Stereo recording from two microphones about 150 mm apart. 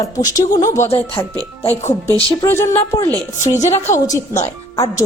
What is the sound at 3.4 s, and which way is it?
Speech, 50° left (ahead or behind).